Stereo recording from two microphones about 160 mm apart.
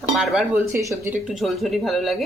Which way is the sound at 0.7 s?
20° right (ahead or behind).